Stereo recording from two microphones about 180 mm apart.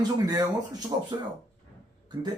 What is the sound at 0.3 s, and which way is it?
Speech, 20° right (ahead or behind).